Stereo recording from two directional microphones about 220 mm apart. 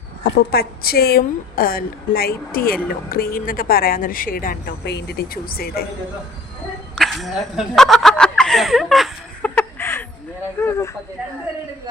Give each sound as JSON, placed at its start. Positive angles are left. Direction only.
{"t": 0.3, "sound": "a woman's voice", "side_deg": 45}
{"t": 6.9, "sound": "a sound", "side_deg": 0}
{"t": 10.6, "sound": "speech", "side_deg": 10}